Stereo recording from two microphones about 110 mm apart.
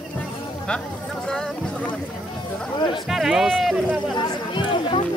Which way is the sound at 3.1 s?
5° right (ahead or behind).